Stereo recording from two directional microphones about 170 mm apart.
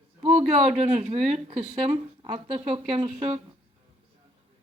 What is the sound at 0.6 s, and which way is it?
Speech, 35° right (ahead or behind).